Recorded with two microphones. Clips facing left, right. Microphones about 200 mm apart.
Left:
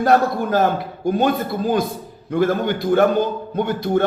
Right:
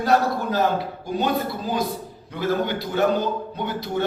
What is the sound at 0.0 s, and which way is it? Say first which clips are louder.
A man's voice: left 4 dB; 50° left (ahead or behind).